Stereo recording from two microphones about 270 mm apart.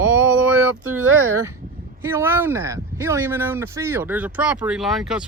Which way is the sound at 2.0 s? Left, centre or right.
Centre.